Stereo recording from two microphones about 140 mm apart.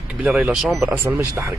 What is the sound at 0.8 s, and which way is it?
Speech, 15° right (ahead or behind).